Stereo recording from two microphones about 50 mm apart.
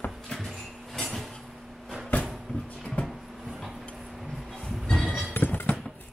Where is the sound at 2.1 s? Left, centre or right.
Left.